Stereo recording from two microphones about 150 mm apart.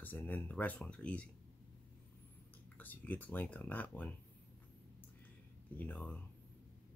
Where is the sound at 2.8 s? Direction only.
10° left (ahead or behind).